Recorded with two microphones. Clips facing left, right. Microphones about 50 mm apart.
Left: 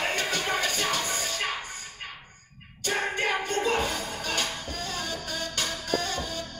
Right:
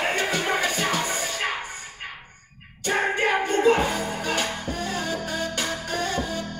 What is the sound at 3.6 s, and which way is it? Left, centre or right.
Music, right.